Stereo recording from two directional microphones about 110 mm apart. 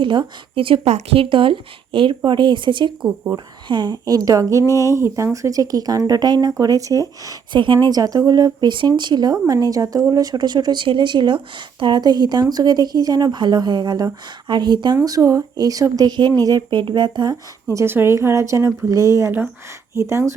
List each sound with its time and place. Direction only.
0.0 s speech: 45° right (ahead or behind)
0.9 s speech: 90° right
1.2 s speech: 50° right (ahead or behind); by 7.3 s 30° right (ahead or behind)
7.5 s speech: 45° right (ahead or behind)
15.0 s speech: 30° right (ahead or behind)
16.6 s speech: 45° right (ahead or behind)
17.7 s speech: 20° right (ahead or behind)